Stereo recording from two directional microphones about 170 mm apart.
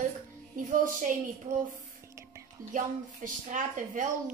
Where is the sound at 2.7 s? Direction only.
50° right (ahead or behind).